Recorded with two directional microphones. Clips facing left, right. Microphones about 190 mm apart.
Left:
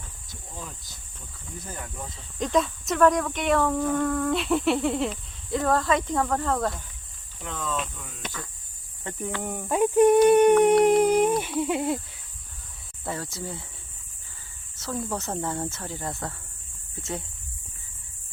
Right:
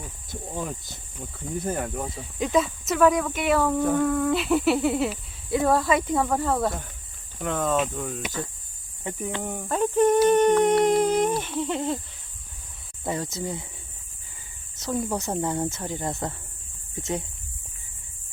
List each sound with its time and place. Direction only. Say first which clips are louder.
0.3 s speech: right 9 dB; 55° right (ahead or behind)
2.0 s speech: right 2 dB; 5° right (ahead or behind)
7.3 s speech: right 7 dB; 55° right (ahead or behind)
9.1 s speech: right 3 dB; 15° right (ahead or behind)
9.4 s speech: even; centre (ahead or behind)
9.6 s humming: left 2 dB; 10° left (ahead or behind)
13.1 s speech: right 4 dB; 20° right (ahead or behind)
14.8 s speech: right 3 dB; 15° right (ahead or behind)